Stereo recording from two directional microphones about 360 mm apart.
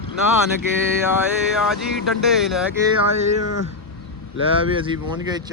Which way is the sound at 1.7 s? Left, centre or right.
Centre.